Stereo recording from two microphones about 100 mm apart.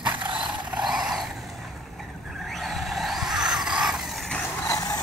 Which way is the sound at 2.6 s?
Centre (ahead or behind).